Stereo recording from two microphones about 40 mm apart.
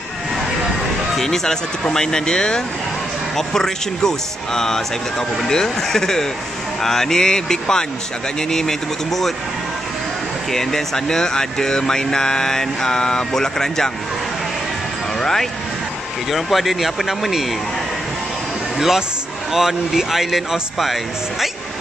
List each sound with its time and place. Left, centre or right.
1.1 s speech: centre
10.5 s speech: centre
15.1 s speech: centre
16.3 s speech: centre
18.8 s speech: centre